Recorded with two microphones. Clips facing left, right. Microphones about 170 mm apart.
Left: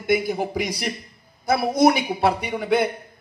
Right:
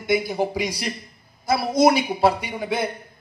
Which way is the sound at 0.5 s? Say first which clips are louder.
Even; 55° left (ahead or behind).